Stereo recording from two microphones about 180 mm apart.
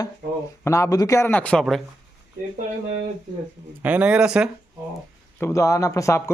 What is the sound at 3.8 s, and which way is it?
Speech, 10° right (ahead or behind).